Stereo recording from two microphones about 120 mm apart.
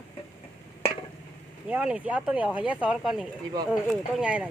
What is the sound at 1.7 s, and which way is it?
Speech, 10° right (ahead or behind).